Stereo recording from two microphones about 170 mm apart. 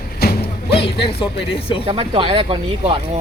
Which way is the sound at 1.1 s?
35° left (ahead or behind).